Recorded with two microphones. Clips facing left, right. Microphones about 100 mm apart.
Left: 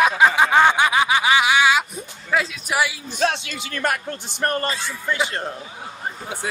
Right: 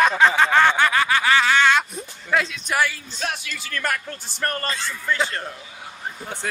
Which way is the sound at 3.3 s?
20° left (ahead or behind).